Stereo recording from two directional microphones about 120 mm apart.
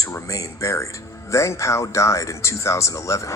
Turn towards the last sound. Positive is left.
turn(degrees=25)  # may be behind; listen again after turning